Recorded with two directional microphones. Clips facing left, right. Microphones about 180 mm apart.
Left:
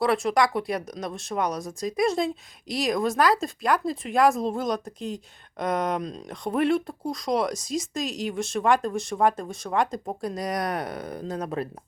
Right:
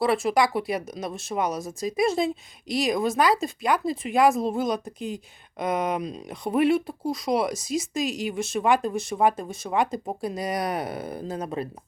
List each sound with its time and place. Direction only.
0.0 s speech: centre (ahead or behind)